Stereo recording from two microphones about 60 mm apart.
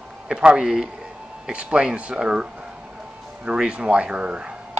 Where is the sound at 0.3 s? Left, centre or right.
Centre.